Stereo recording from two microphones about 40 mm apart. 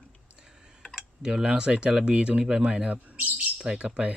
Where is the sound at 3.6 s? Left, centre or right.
Right.